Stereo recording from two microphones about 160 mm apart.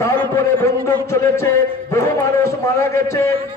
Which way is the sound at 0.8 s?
15° left (ahead or behind).